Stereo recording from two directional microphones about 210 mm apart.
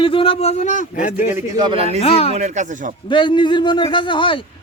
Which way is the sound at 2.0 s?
30° left (ahead or behind).